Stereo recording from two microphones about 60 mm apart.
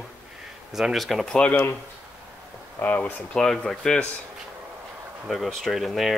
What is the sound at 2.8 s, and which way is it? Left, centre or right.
Speech, left.